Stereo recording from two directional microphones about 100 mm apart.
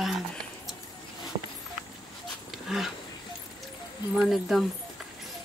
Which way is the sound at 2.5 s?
5° right (ahead or behind).